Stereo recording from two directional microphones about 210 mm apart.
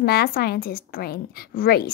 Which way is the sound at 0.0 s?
45° left (ahead or behind).